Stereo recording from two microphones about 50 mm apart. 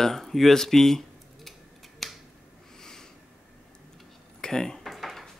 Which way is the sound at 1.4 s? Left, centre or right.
Centre.